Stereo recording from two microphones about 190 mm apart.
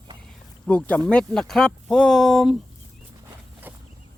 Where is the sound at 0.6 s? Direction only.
5° left (ahead or behind).